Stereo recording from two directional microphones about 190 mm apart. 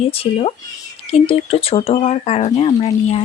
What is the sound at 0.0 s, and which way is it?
Speech, 30° left (ahead or behind).